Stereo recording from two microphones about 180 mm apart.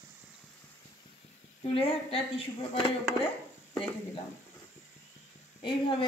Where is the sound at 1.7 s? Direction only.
30° left (ahead or behind).